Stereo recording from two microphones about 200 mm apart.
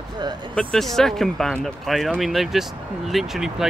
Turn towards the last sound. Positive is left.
turn(degrees=0)  # may be behind; listen again after turning